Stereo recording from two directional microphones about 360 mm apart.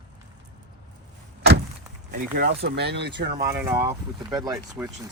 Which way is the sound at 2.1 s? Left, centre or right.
Right.